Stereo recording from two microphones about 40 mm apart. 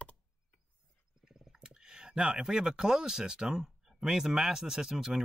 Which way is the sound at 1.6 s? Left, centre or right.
Centre.